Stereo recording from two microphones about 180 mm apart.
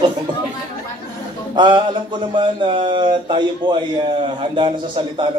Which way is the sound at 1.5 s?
25° right (ahead or behind).